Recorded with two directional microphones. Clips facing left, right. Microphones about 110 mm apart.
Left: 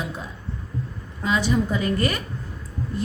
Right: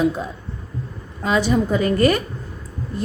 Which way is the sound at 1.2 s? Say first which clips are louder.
Right 4 dB; 50° right (ahead or behind).